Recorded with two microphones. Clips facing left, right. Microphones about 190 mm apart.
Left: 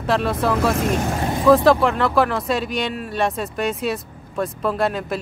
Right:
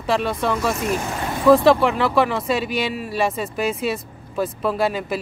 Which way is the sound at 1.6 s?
Centre (ahead or behind).